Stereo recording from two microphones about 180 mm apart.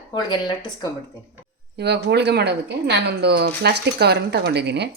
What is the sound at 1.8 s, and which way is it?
A woman's voice, 70° right (ahead or behind).